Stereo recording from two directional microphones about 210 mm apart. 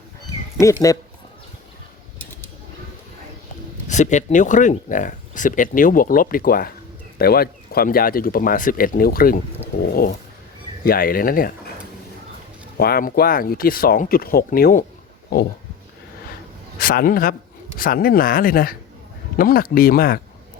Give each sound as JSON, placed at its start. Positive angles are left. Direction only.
{"t": 0.6, "sound": "speech", "side_deg": 15}
{"t": 3.8, "sound": "speech", "side_deg": 35}
{"t": 10.8, "sound": "speech", "side_deg": 45}
{"t": 12.7, "sound": "speech", "side_deg": 45}
{"t": 16.7, "sound": "a man's voice", "side_deg": 45}